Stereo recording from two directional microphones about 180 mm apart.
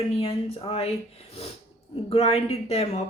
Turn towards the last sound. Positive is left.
turn(degrees=35)  # may be behind; listen again after turning